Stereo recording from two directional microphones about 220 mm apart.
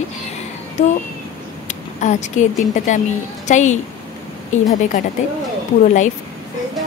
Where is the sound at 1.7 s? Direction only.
35° left (ahead or behind).